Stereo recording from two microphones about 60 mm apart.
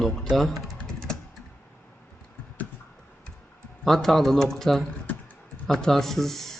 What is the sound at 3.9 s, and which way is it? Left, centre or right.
Speech, centre.